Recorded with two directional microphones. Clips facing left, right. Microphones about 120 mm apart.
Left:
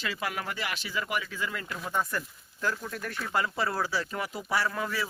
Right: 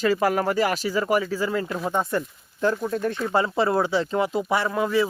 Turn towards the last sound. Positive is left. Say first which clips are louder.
# right 8 dB
turn(degrees=-20)  # may be behind; listen again after turning